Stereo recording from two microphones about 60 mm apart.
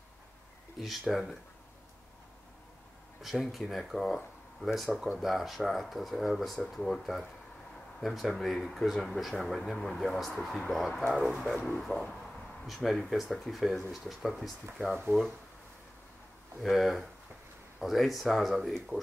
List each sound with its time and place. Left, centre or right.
0.7 s speech: centre
3.2 s speech: centre
11.5 s speech: centre
16.6 s speech: centre